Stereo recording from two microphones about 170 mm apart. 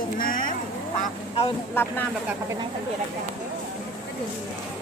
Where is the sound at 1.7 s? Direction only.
10° left (ahead or behind).